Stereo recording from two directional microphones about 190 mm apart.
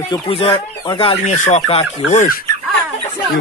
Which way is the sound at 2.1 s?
45° left (ahead or behind).